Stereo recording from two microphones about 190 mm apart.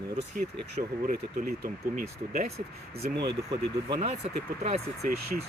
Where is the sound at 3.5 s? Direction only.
25° right (ahead or behind).